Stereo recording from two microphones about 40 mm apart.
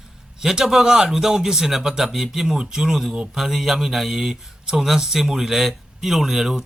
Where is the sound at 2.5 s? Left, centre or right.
Centre.